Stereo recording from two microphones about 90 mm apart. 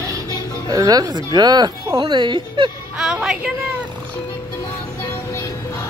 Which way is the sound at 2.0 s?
60° right (ahead or behind).